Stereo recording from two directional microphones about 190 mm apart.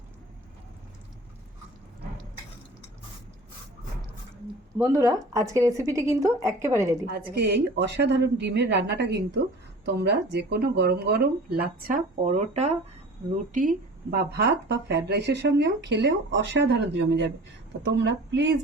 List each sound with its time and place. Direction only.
4.8 s speech: 15° right (ahead or behind)
7.1 s speech: 60° right (ahead or behind)
12.2 s a woman's voice: 40° right (ahead or behind); by 18.4 s 70° right (ahead or behind)